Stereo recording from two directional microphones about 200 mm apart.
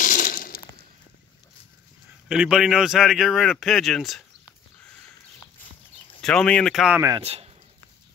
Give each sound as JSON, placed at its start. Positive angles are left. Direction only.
{"t": 0.0, "sound": "glass", "side_deg": 40}
{"t": 2.2, "sound": "speech", "side_deg": -5}
{"t": 6.2, "sound": "speech", "side_deg": 5}
{"t": 7.2, "sound": "speech", "side_deg": -30}